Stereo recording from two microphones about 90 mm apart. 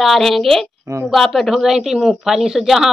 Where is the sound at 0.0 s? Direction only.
Centre (ahead or behind).